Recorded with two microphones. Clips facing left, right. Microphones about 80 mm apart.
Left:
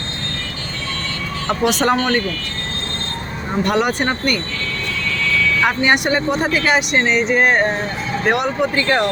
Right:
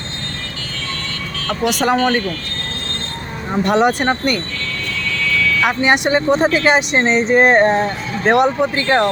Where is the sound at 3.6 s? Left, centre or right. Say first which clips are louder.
Right 4 dB; right.